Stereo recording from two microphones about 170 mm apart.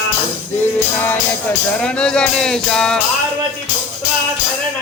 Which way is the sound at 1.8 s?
5° left (ahead or behind).